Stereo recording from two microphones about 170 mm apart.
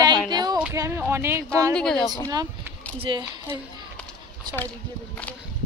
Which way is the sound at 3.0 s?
30° right (ahead or behind).